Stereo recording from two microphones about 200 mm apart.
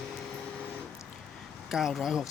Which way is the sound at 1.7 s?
Centre (ahead or behind).